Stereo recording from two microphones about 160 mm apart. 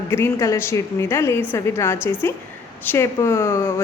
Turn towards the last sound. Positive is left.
turn(degrees=15)  # may be behind; listen again after turning